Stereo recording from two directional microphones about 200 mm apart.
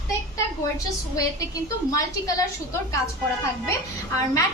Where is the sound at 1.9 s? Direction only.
15° left (ahead or behind).